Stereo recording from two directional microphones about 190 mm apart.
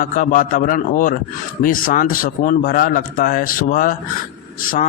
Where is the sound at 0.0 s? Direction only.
45° left (ahead or behind).